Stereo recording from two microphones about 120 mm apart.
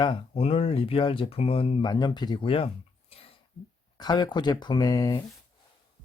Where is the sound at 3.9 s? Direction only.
35° left (ahead or behind).